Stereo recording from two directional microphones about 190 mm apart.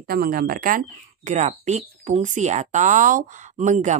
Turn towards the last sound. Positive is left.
turn(degrees=-40)  # may be behind; listen again after turning